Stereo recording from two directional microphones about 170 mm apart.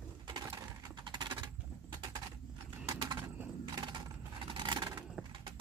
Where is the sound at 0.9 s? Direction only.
25° right (ahead or behind).